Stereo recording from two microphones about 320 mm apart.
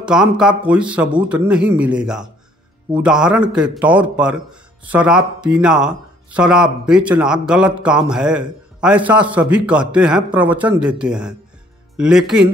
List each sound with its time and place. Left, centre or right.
0.0 s a man's voice: centre
1.1 s speech: centre
1.5 s a man's voice: centre